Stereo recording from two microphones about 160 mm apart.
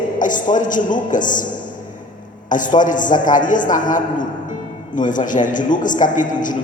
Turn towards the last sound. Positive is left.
turn(degrees=55)  # may be behind; listen again after turning